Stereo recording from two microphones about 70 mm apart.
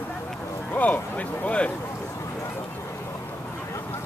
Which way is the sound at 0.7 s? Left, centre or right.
Left.